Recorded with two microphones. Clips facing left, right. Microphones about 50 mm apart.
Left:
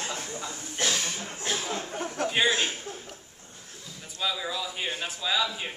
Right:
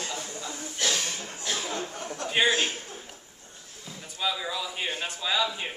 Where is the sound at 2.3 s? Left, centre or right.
Centre.